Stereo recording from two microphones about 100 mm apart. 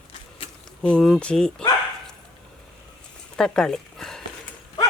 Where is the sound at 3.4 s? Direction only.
5° left (ahead or behind).